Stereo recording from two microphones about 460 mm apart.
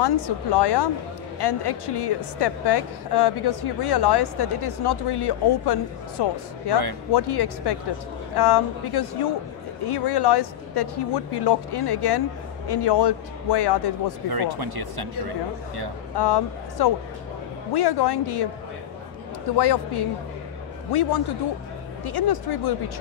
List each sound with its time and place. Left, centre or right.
0.0 s a woman's voice: left
14.3 s speech: right
16.2 s a woman's voice: left
19.5 s a woman's voice: left
20.9 s speech: left